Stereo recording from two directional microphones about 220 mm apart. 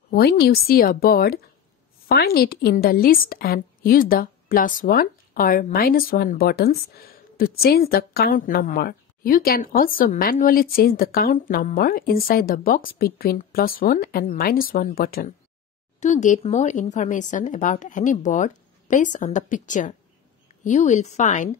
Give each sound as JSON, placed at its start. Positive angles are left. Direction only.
{"t": 0.1, "sound": "a woman's voice", "side_deg": 45}